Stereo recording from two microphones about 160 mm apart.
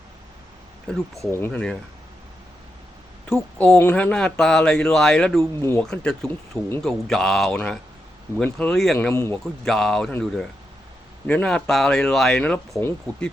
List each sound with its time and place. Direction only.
0.9 s speech: centre (ahead or behind)
1.3 s speech: 10° left (ahead or behind)
3.6 s speech: 10° left (ahead or behind)
5.4 s speech: 15° left (ahead or behind)
5.8 s speech: 5° left (ahead or behind)
6.2 s speech: 15° left (ahead or behind)
6.8 s speech: centre (ahead or behind)